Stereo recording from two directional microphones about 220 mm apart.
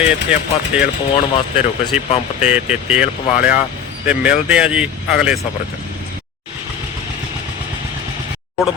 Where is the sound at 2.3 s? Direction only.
5° right (ahead or behind).